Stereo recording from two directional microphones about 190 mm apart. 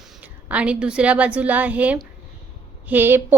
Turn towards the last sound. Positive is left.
turn(degrees=-10)  # may be behind; listen again after turning